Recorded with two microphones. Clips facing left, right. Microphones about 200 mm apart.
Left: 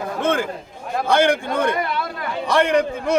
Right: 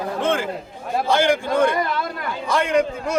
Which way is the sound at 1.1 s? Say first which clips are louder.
Left 1 dB; 55° left (ahead or behind).